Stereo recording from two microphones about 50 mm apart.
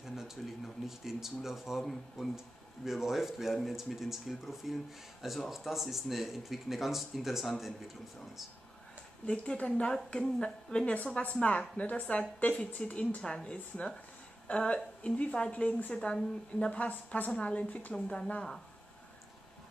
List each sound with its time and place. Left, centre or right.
0.0 s speech: centre
9.2 s a woman's voice: left
17.3 s speech: centre
17.6 s a woman's voice: left
17.9 s speech: centre